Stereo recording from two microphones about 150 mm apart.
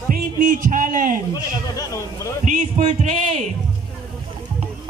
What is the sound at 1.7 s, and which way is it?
Speech, 20° left (ahead or behind).